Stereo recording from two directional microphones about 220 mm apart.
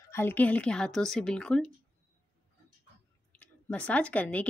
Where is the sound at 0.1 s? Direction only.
10° left (ahead or behind).